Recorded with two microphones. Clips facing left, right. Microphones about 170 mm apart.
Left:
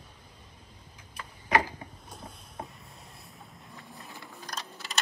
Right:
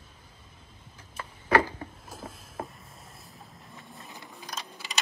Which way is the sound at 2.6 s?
90° right.